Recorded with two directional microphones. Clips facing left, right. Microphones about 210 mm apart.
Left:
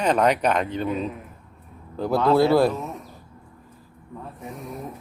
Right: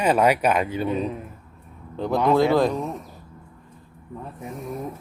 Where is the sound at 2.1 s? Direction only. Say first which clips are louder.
Left 1 dB; 15° right (ahead or behind).